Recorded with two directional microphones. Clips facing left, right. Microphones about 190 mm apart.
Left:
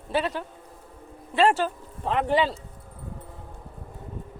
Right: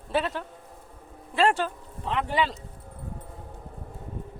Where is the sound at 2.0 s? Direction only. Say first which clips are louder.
Left 4 dB; 45° left (ahead or behind).